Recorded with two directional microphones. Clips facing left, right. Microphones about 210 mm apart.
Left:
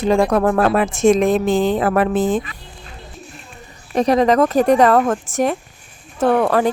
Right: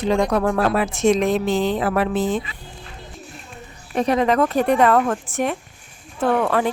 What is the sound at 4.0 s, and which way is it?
A woman's voice, 40° left (ahead or behind).